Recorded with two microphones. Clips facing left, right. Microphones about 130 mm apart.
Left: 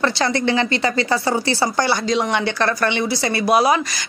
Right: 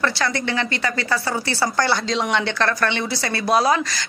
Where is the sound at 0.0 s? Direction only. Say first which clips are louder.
Left 4 dB; 25° left (ahead or behind).